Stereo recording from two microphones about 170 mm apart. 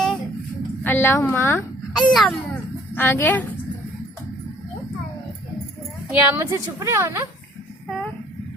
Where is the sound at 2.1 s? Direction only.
Centre (ahead or behind).